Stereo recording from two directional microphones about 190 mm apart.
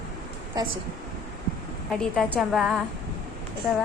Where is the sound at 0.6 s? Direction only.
20° right (ahead or behind).